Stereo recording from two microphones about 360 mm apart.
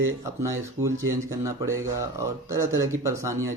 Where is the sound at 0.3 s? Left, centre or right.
Centre.